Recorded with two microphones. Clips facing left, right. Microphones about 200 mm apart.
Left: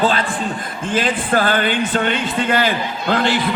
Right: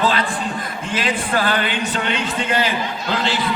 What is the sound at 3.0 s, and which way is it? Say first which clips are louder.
Speech: left 6 dB; 55° left (ahead or behind).